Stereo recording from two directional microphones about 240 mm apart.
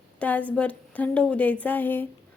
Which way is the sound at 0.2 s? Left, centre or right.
Centre.